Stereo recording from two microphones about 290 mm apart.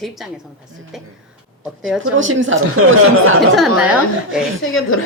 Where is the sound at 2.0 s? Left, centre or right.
Right.